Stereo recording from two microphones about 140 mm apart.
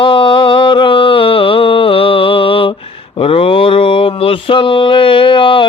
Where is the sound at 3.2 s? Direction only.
40° left (ahead or behind).